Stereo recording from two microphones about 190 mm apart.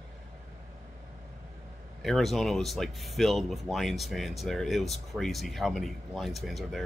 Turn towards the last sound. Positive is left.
turn(degrees=0)  # may be behind; listen again after turning